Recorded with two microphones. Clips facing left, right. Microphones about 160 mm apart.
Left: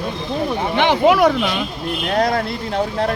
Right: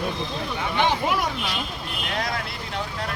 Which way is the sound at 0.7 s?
80° left.